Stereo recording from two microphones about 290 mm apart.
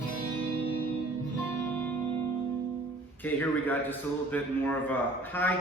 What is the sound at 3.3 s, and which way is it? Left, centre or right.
A man's voice, centre.